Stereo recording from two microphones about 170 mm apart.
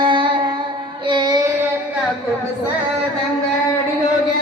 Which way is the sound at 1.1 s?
25° right (ahead or behind).